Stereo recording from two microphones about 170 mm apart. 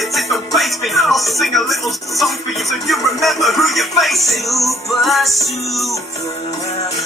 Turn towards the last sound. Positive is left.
turn(degrees=20)  # may be behind; listen again after turning